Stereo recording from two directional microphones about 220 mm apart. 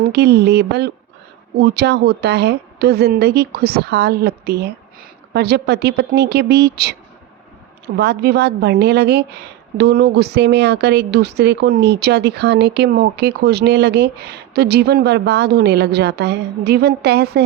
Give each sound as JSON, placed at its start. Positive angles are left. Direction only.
{"t": 0.1, "sound": "speech", "side_deg": -50}
{"t": 7.9, "sound": "speech", "side_deg": -50}